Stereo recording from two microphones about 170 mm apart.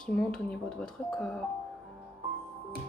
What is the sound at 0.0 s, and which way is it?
Speech, 5° left (ahead or behind).